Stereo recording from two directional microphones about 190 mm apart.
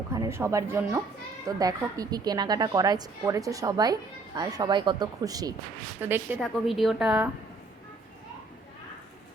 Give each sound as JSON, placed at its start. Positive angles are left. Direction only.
{"t": 0.1, "sound": "a woman's voice", "side_deg": -15}
{"t": 6.4, "sound": "a woman's voice", "side_deg": 0}